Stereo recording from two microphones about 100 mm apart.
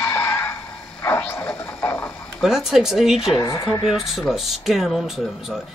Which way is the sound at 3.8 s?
Centre (ahead or behind).